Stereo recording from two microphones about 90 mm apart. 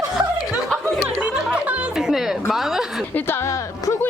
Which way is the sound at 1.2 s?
15° right (ahead or behind).